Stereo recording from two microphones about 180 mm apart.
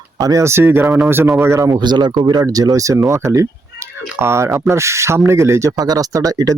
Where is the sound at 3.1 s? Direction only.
15° right (ahead or behind).